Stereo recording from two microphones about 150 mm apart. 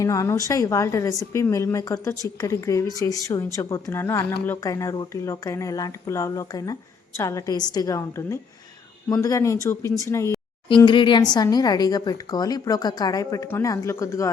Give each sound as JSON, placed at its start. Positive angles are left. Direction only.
{"t": 0.0, "sound": "speech", "side_deg": 20}
{"t": 10.7, "sound": "speech", "side_deg": 30}